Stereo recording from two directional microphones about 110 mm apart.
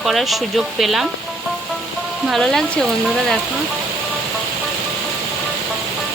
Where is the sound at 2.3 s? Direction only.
5° left (ahead or behind).